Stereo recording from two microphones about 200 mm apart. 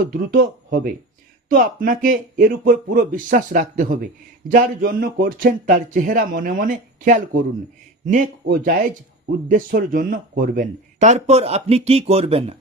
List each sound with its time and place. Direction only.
0.0 s speech: 45° right (ahead or behind); by 12.5 s 30° right (ahead or behind)